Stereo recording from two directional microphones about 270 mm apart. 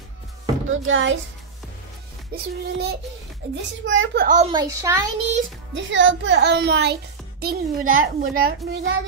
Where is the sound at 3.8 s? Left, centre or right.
Right.